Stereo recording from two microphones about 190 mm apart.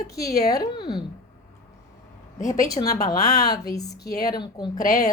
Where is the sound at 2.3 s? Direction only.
40° left (ahead or behind).